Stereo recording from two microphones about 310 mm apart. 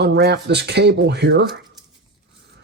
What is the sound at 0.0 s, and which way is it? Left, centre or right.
Speech, right.